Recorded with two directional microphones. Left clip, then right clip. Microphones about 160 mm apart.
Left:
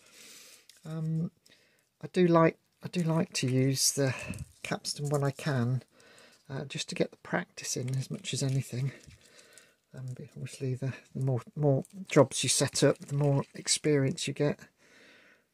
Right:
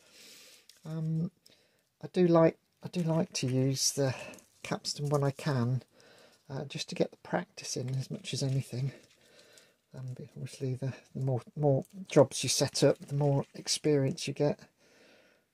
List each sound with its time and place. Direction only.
0.2 s a sound: 5° left (ahead or behind)
2.0 s speech: 15° left (ahead or behind)
4.6 s speech: centre (ahead or behind)